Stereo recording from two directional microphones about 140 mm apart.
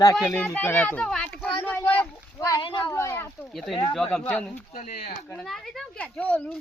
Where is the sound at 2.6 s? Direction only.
35° left (ahead or behind).